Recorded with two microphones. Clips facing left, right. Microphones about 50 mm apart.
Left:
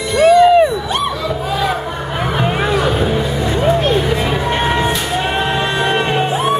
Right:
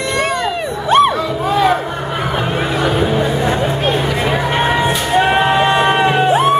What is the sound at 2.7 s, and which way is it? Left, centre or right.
Music, centre.